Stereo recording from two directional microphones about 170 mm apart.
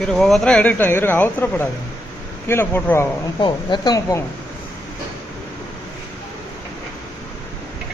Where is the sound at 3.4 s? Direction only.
25° left (ahead or behind).